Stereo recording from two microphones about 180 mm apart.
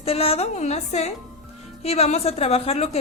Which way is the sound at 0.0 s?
35° left (ahead or behind).